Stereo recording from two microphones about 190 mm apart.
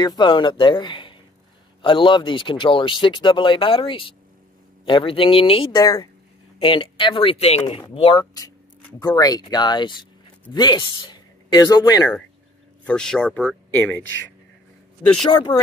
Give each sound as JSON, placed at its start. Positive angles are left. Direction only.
{"t": 0.0, "sound": "speech", "side_deg": 25}
{"t": 12.8, "sound": "speech", "side_deg": 5}